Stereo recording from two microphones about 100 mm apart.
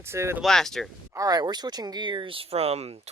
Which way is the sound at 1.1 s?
35° right (ahead or behind).